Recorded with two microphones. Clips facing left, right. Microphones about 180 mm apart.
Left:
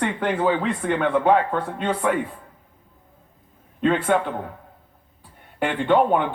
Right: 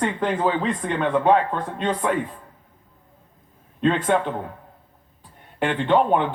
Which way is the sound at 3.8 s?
10° left (ahead or behind).